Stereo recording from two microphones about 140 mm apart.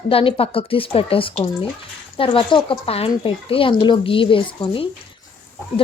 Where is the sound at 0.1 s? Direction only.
40° left (ahead or behind).